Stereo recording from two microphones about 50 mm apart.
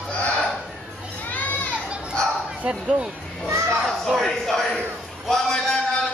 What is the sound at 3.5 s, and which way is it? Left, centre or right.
Speech, right.